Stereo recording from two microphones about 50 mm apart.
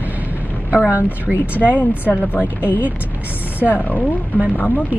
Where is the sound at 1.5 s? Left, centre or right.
Left.